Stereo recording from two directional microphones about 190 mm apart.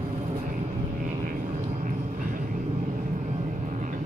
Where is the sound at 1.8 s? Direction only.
45° right (ahead or behind).